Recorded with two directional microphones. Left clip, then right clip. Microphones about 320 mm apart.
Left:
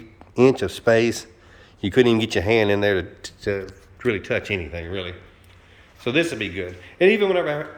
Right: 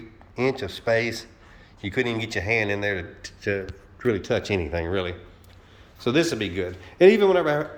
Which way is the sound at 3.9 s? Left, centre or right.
Centre.